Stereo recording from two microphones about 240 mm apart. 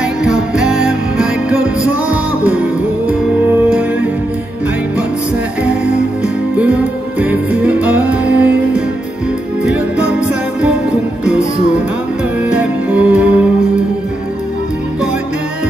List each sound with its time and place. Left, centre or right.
0.2 s music: centre
7.2 s music: centre
12.4 s music: centre